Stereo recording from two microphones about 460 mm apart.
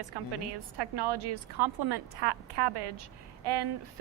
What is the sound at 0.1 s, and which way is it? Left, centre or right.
A woman's voice, right.